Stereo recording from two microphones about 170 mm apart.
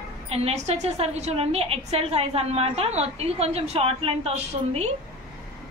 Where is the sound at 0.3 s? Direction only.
35° right (ahead or behind).